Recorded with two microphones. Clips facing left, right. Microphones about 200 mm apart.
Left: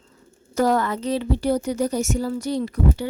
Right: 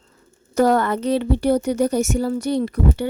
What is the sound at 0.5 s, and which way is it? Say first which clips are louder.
A woman's voice: right 3 dB; 60° right (ahead or behind).